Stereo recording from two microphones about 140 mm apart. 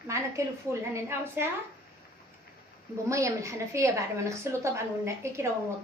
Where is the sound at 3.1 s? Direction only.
20° right (ahead or behind).